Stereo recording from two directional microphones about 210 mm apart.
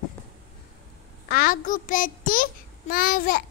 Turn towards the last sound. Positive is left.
turn(degrees=40)  # may be behind; listen again after turning